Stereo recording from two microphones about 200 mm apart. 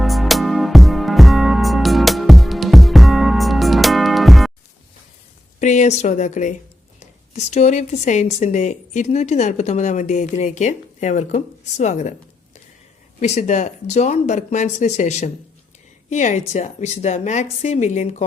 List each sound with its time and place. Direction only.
0.0 s music: centre (ahead or behind)
5.5 s a woman's voice: 35° left (ahead or behind)
13.1 s a woman's voice: 35° left (ahead or behind)